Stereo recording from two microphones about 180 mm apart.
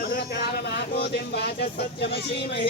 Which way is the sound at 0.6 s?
65° left (ahead or behind).